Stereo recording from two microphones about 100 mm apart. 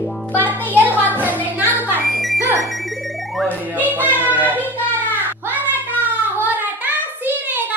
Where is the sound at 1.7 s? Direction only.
20° right (ahead or behind).